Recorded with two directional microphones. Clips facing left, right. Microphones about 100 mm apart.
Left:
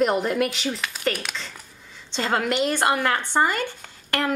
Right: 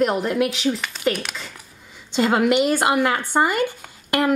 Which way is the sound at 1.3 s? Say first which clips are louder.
Even; 10° right (ahead or behind).